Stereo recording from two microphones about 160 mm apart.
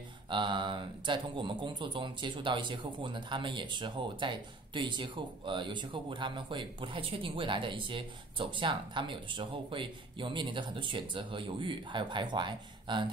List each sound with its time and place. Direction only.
0.3 s speech: 30° right (ahead or behind)